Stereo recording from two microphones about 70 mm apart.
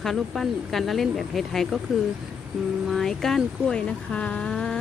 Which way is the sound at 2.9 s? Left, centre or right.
Centre.